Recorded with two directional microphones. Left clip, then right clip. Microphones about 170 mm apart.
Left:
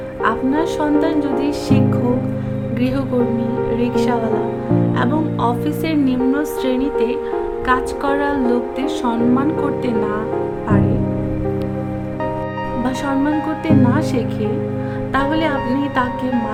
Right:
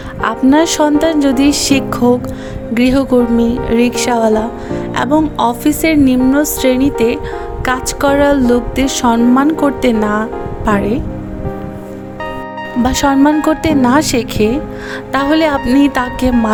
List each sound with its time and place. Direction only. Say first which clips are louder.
0.2 s speech: right 6 dB; 60° right (ahead or behind); by 10.2 s 40° right (ahead or behind)
12.8 s speech: right 10 dB; 55° right (ahead or behind)